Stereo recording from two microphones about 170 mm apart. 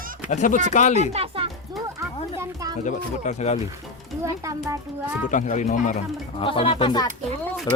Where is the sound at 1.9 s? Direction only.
15° right (ahead or behind).